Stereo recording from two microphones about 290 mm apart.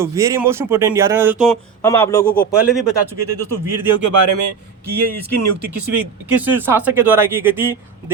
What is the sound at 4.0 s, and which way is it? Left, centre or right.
Speech, right.